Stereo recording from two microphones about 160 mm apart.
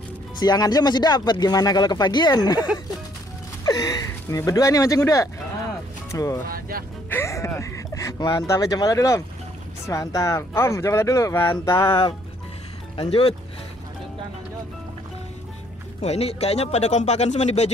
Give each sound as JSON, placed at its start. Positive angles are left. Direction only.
{"t": 0.4, "sound": "speech", "side_deg": 25}
{"t": 12.9, "sound": "speech", "side_deg": 35}
{"t": 16.0, "sound": "speech", "side_deg": 40}